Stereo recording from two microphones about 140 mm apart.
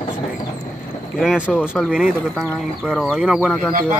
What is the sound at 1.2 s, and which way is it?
Speech, centre (ahead or behind).